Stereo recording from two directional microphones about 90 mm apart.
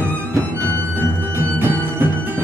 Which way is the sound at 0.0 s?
20° right (ahead or behind).